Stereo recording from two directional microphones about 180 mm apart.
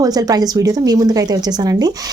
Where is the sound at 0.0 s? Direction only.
20° right (ahead or behind).